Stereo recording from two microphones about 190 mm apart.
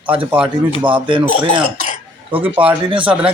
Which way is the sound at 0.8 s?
25° right (ahead or behind).